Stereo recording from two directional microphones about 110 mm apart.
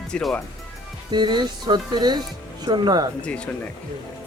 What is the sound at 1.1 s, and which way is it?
A man's voice, 45° right (ahead or behind).